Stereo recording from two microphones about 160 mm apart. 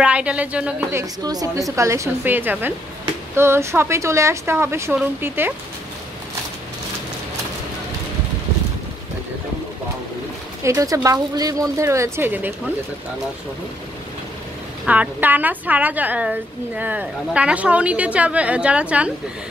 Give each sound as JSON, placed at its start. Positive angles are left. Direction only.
{"t": 0.0, "sound": "a woman's voice", "side_deg": -5}
{"t": 1.2, "sound": "a woman's voice", "side_deg": -25}
{"t": 10.6, "sound": "speech", "side_deg": -20}
{"t": 14.9, "sound": "a woman's voice", "side_deg": -10}